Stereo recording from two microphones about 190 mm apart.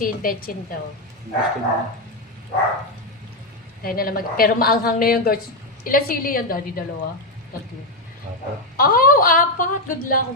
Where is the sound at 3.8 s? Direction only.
50° left (ahead or behind).